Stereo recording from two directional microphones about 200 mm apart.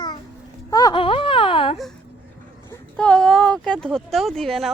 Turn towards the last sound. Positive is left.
turn(degrees=0)  # may be behind; listen again after turning